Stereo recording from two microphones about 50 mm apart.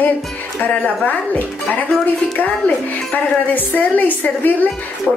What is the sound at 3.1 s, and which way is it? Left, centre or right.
A woman's voice, left.